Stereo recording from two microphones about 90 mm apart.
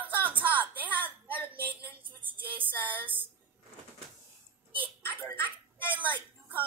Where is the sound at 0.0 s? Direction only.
20° right (ahead or behind).